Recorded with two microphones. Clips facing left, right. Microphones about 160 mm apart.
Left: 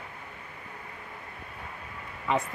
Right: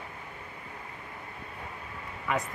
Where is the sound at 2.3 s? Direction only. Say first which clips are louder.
Left 3 dB; 20° left (ahead or behind).